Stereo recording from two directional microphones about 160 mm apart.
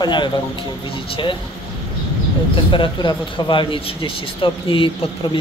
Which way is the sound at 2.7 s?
30° left (ahead or behind).